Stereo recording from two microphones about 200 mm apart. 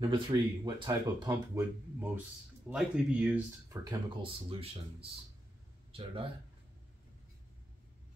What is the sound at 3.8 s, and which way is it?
Speech, 20° right (ahead or behind).